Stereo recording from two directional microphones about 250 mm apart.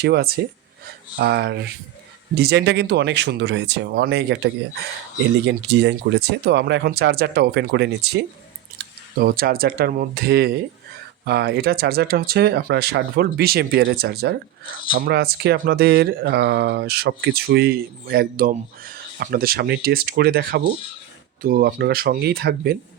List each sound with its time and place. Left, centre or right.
0.0 s speech: right
5.5 s speech: right